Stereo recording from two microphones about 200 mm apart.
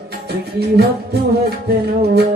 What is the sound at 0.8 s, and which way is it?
Music, 50° right (ahead or behind).